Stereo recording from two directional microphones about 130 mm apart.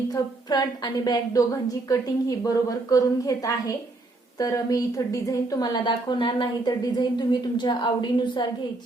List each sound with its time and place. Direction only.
0.1 s a woman's voice: 30° left (ahead or behind)